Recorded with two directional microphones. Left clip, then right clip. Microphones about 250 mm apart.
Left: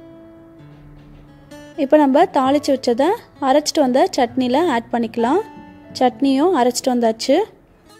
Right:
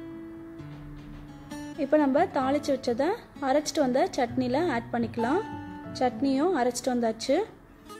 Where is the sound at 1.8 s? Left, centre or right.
Left.